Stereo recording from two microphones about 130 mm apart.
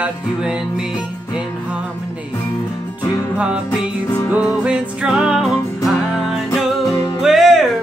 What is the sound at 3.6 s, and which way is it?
Music, 15° left (ahead or behind).